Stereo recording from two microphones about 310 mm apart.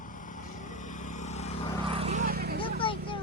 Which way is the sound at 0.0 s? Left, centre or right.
Left.